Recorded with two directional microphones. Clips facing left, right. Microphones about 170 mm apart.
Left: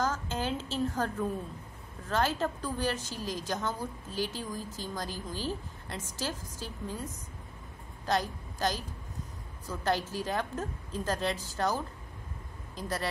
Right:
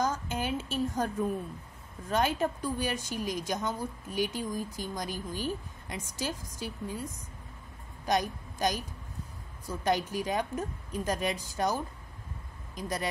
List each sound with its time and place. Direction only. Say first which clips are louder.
0.0 s a sound: right 1 dB; 15° right (ahead or behind)
2.0 s a woman's voice: right 1 dB; 15° right (ahead or behind)
8.0 s a woman's voice: right 1 dB; 15° right (ahead or behind)